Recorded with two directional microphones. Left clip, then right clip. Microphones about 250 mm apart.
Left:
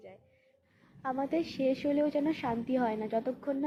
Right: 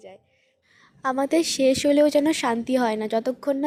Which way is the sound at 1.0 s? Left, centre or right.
Right.